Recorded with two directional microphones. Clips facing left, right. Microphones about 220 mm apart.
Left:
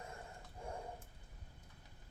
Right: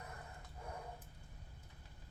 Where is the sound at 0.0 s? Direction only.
25° left (ahead or behind).